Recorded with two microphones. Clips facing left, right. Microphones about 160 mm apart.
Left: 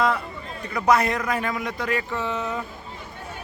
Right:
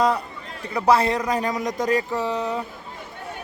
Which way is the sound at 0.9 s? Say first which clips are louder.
Right 2 dB; 30° right (ahead or behind).